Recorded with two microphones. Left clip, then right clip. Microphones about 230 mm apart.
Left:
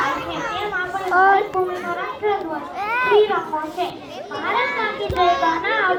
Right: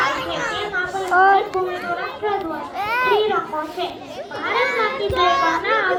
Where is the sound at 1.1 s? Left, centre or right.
Centre.